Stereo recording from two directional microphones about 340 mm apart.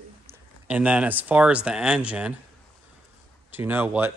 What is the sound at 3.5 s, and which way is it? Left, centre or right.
Speech, centre.